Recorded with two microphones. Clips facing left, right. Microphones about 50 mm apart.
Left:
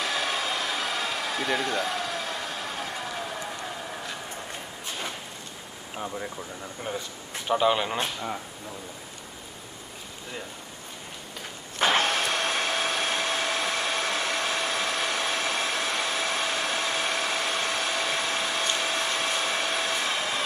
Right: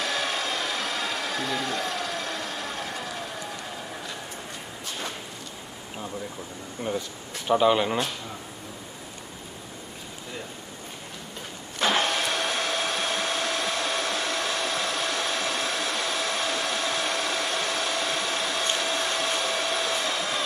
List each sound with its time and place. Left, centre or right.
0.0 s a sound: centre
6.9 s speech: centre
7.4 s speech: centre
11.8 s vehicle: left
12.2 s a sound: left
19.1 s hair dryer: left